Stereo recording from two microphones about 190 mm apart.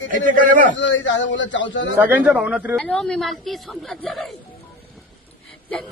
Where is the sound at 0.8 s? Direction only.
75° left (ahead or behind).